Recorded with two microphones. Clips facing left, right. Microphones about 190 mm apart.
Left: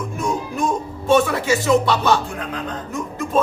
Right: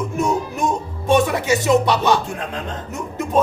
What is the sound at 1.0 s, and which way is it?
Speech, 15° right (ahead or behind).